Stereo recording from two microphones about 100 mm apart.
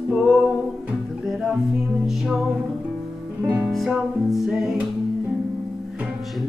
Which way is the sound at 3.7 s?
Centre (ahead or behind).